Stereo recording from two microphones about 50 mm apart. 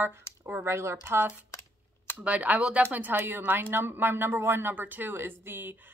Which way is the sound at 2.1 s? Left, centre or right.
Right.